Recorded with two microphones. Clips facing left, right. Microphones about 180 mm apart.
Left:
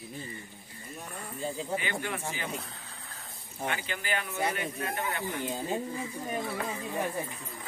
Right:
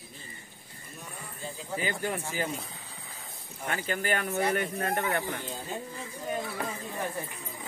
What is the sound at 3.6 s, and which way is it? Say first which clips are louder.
Speech: right 3 dB; 40° right (ahead or behind).